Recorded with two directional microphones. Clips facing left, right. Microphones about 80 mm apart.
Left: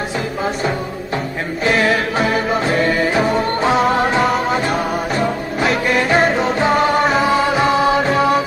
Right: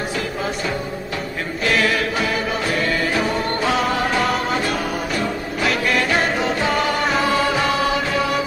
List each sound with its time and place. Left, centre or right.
1.6 s music: left
4.2 s music: centre
4.6 s music: left
7.0 s music: centre
7.5 s music: left